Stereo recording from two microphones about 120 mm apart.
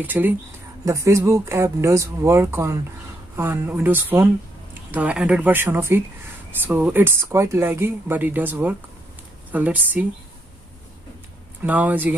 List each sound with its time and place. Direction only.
0.0 s speech: 15° right (ahead or behind)
11.6 s speech: 15° right (ahead or behind)